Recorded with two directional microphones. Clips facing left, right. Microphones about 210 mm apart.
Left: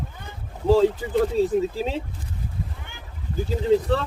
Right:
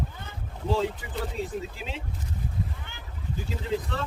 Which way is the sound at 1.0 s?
30° left (ahead or behind).